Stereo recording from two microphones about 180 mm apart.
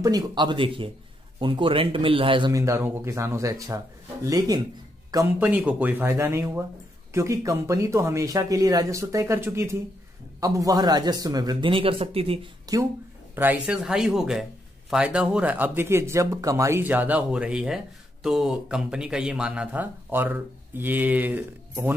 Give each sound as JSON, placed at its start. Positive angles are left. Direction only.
{"t": 0.0, "sound": "speech", "side_deg": -25}
{"t": 12.7, "sound": "speech", "side_deg": -20}
{"t": 13.3, "sound": "speech", "side_deg": -10}